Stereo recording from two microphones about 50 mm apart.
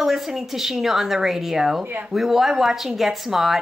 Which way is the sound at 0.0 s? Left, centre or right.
Centre.